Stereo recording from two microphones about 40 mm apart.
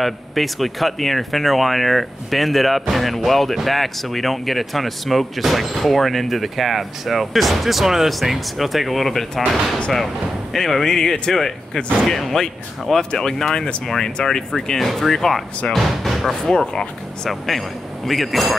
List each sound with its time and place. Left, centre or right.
0.0 s speech: centre
10.5 s speech: centre
16.4 s speech: centre
17.3 s speech: centre